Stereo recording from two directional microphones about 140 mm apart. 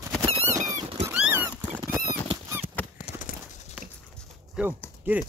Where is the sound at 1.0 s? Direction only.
10° right (ahead or behind).